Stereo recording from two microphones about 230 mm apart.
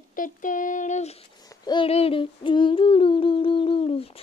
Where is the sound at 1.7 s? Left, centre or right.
Left.